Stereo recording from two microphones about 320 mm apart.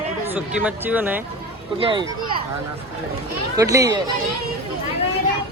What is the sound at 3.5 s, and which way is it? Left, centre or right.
Speech, centre.